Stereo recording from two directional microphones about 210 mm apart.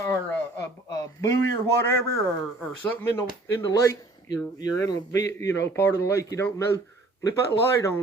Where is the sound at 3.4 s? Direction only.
15° left (ahead or behind).